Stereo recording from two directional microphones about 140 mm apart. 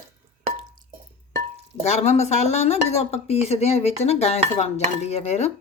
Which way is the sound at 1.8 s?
55° left (ahead or behind).